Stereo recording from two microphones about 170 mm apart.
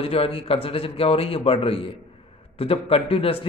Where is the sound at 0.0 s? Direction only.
35° left (ahead or behind).